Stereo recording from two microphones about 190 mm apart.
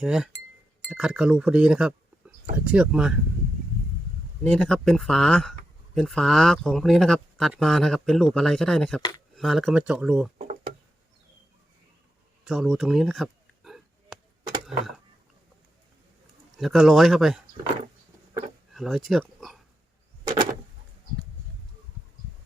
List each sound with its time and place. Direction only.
0.0 s speech: 5° right (ahead or behind)
4.4 s speech: 5° left (ahead or behind)
9.0 s speech: 20° left (ahead or behind)
9.3 s speech: centre (ahead or behind)
10.3 s a sound: 35° right (ahead or behind)
12.5 s a sound: centre (ahead or behind)
16.6 s speech: centre (ahead or behind)
18.7 s speech: centre (ahead or behind)